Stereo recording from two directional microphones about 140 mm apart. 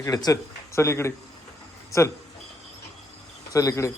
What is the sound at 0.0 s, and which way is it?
Speech, 25° left (ahead or behind).